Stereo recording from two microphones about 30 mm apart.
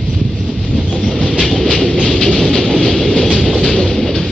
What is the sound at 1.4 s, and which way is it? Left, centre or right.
Train, centre.